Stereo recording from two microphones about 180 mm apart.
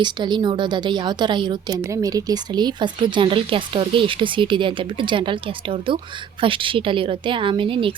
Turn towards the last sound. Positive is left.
turn(degrees=-30)  # may be behind; listen again after turning